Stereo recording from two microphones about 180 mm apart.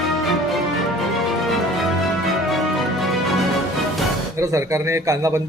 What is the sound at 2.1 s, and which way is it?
Music, centre (ahead or behind).